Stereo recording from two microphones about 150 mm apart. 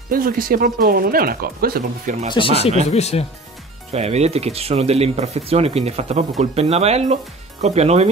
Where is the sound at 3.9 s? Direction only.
45° right (ahead or behind).